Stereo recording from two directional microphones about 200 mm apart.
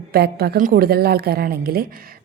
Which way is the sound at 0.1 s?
50° right (ahead or behind).